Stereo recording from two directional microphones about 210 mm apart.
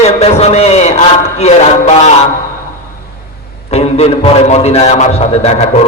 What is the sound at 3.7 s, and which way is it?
A man's voice, 30° left (ahead or behind).